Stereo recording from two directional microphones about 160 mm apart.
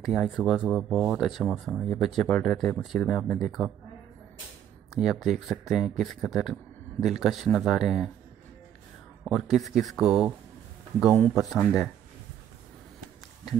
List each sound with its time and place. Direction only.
0.0 s speech: centre (ahead or behind)
4.9 s speech: centre (ahead or behind)
9.2 s speech: centre (ahead or behind)
11.5 s speech: 5° right (ahead or behind)